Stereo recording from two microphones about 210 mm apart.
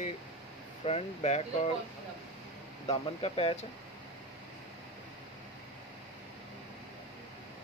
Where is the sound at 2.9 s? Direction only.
25° left (ahead or behind).